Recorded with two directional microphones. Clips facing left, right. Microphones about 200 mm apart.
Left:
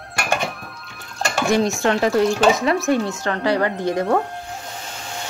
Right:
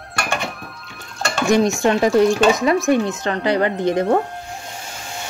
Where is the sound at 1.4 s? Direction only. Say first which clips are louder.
Right 3 dB; 15° right (ahead or behind).